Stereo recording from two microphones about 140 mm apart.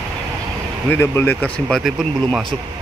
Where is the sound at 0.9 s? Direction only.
15° left (ahead or behind).